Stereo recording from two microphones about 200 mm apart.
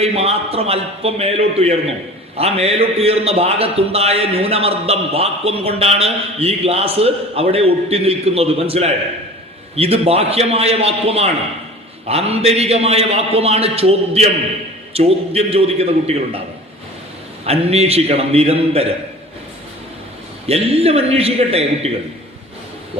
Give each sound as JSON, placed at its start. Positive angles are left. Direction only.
{"t": 0.0, "sound": "a man's voice", "side_deg": -30}
{"t": 17.4, "sound": "a man's voice", "side_deg": -30}
{"t": 20.5, "sound": "a man's voice", "side_deg": -30}